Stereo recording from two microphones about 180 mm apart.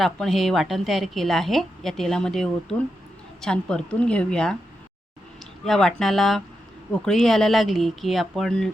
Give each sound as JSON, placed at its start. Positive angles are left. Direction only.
{"t": 0.0, "sound": "a woman's voice", "side_deg": 0}
{"t": 5.6, "sound": "a woman's voice", "side_deg": 0}